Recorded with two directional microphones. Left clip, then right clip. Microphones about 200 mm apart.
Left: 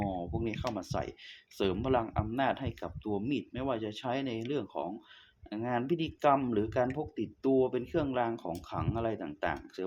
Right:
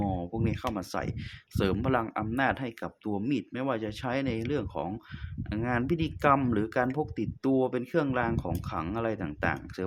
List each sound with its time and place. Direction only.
0.0 s speech: 40° right (ahead or behind)